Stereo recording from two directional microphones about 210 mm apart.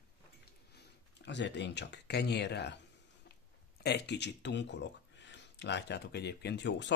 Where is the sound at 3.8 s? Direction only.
55° left (ahead or behind).